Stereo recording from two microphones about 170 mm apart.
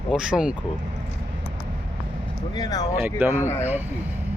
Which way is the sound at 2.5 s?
25° left (ahead or behind).